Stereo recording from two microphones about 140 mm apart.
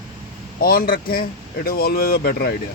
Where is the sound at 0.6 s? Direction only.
90° left.